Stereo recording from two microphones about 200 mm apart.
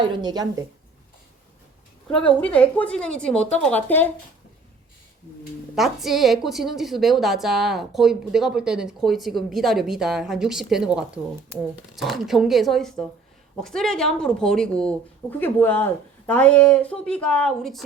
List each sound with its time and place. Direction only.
0.0 s speech: 20° right (ahead or behind)
2.0 s a woman's voice: 5° left (ahead or behind)
5.7 s a woman's voice: centre (ahead or behind)